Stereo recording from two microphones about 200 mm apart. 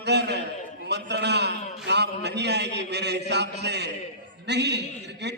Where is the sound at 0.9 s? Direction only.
60° right (ahead or behind).